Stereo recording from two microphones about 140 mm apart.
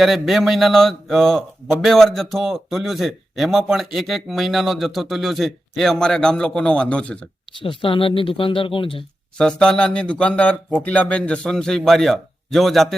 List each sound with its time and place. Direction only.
0.0 s a man's voice: centre (ahead or behind)
7.6 s speech: 40° left (ahead or behind)
9.4 s a man's voice: 5° left (ahead or behind)